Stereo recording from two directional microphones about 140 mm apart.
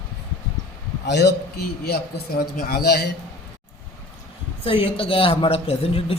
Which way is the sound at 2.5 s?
90° left.